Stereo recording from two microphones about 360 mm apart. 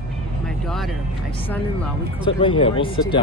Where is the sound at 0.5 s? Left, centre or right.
Centre.